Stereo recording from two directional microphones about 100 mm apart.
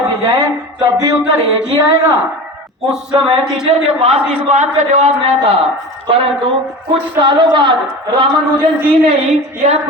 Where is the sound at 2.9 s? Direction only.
5° right (ahead or behind).